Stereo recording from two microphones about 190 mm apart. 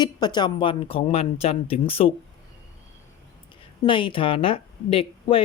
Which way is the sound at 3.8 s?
25° left (ahead or behind).